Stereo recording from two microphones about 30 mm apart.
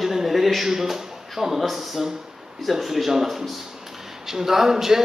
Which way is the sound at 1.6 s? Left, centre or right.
Centre.